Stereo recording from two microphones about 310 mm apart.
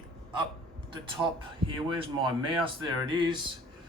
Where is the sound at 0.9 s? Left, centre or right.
Centre.